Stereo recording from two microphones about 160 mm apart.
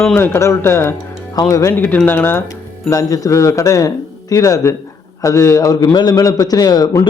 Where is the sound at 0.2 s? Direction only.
15° left (ahead or behind).